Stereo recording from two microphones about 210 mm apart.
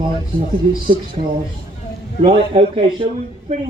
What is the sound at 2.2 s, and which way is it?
Speech, 25° right (ahead or behind).